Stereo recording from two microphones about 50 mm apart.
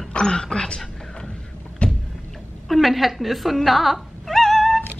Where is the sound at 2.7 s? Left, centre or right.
Centre.